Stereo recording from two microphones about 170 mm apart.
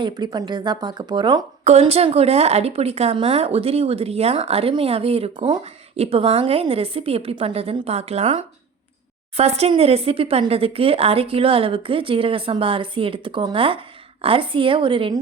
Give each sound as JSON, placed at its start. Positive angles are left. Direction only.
{"t": 0.0, "sound": "speech", "side_deg": -25}
{"t": 1.6, "sound": "speech", "side_deg": -40}